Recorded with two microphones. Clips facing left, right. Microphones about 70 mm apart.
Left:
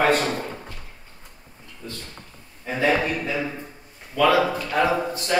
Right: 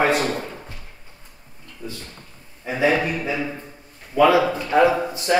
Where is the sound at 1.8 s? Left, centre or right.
Centre.